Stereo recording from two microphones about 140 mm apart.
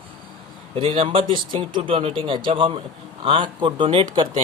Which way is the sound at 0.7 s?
40° right (ahead or behind).